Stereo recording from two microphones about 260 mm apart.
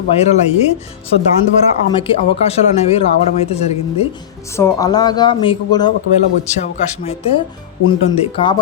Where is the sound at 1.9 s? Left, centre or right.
Left.